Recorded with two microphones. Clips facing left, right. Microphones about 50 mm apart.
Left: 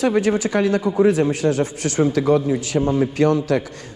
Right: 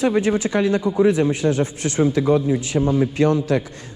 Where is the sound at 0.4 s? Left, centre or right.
Centre.